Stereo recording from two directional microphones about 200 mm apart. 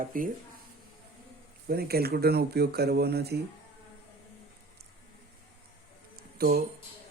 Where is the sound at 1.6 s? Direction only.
50° right (ahead or behind).